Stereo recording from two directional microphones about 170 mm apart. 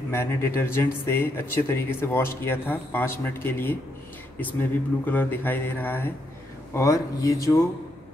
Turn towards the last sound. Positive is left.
turn(degrees=20)  # may be behind; listen again after turning